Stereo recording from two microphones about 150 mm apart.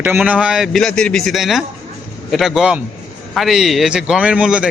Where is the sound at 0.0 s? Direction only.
10° right (ahead or behind).